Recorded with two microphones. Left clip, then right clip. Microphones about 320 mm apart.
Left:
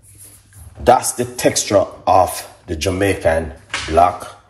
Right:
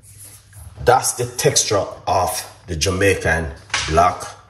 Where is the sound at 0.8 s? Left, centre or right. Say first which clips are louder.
Left 2 dB; left; by 4.3 s centre.